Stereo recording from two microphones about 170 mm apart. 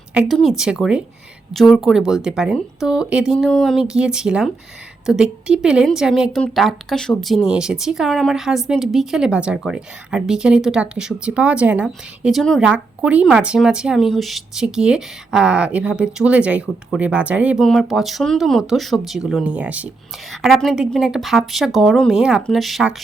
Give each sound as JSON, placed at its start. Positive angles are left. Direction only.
{"t": 0.1, "sound": "a woman's voice", "side_deg": 0}